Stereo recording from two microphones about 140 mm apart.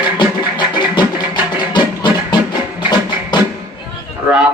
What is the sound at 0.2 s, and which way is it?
Music, 35° left (ahead or behind).